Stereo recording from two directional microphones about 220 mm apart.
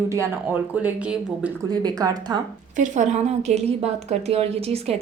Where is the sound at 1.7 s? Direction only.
15° right (ahead or behind).